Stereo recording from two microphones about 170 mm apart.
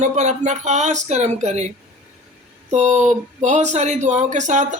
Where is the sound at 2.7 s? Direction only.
45° right (ahead or behind).